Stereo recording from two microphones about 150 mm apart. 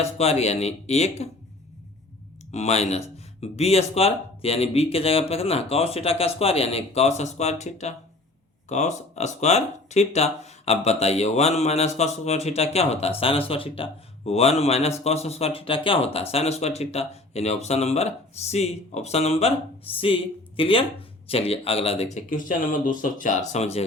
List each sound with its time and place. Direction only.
0.0 s speech: 45° left (ahead or behind)
2.5 s speech: 45° left (ahead or behind)
22.3 s speech: 65° left (ahead or behind)
23.5 s speech: 45° left (ahead or behind)